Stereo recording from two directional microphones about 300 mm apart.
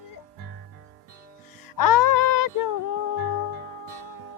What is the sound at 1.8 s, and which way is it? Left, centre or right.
Music, left.